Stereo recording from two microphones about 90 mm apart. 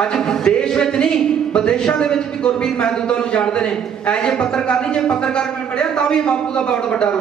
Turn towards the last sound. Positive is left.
turn(degrees=10)  # may be behind; listen again after turning